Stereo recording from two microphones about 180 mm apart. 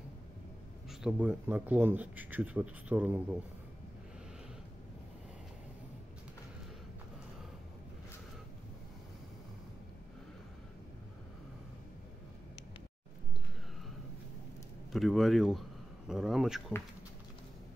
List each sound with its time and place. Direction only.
1.0 s speech: 10° right (ahead or behind)
14.9 s speech: centre (ahead or behind)